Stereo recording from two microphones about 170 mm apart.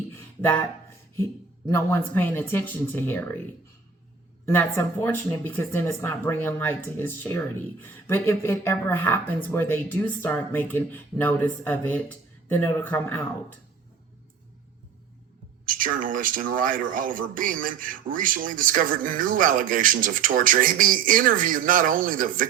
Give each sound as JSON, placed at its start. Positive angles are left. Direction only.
{"t": 0.1, "sound": "a sound", "side_deg": 10}
{"t": 1.1, "sound": "speech", "side_deg": 15}
{"t": 4.4, "sound": "speech", "side_deg": 15}
{"t": 15.6, "sound": "speech", "side_deg": -55}